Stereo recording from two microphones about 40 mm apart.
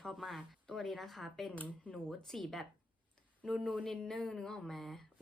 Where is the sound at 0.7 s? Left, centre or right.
Centre.